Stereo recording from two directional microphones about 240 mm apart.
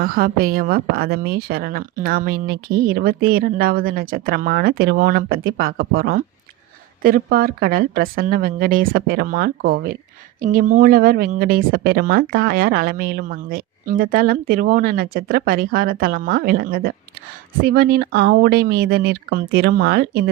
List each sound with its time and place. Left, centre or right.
0.0 s speech: right